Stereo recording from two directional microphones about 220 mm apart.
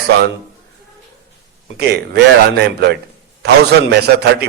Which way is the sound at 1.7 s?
50° right (ahead or behind).